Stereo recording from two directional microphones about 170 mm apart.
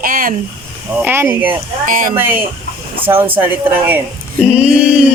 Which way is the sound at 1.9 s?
50° right (ahead or behind).